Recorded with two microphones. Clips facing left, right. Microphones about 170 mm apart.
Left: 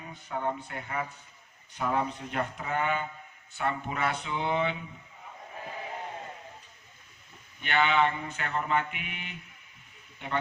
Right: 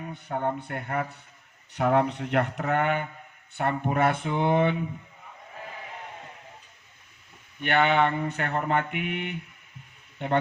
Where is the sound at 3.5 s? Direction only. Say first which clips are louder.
Right 5 dB; 55° right (ahead or behind).